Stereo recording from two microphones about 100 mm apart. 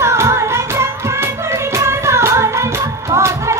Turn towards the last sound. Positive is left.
turn(degrees=-30)  # may be behind; listen again after turning